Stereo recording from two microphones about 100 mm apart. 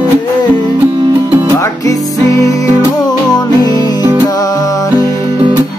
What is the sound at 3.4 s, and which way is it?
Music, 40° left (ahead or behind).